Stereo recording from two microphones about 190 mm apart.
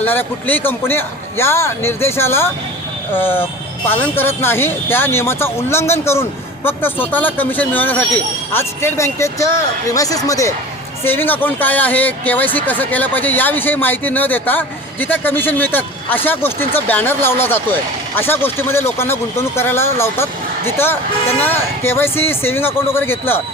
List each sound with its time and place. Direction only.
0.0 s speech: 10° left (ahead or behind)